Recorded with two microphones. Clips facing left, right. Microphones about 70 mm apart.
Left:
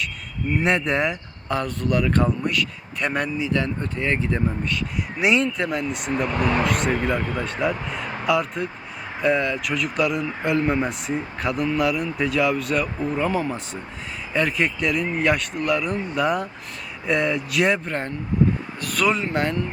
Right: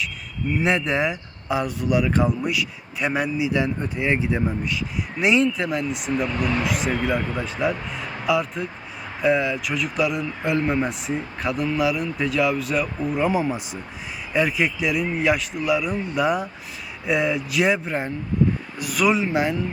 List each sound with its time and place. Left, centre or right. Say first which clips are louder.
0.6 s a man's voice: even; centre
6.2 s speech: left 5 dB; left
6.7 s a man's voice: left 1 dB; centre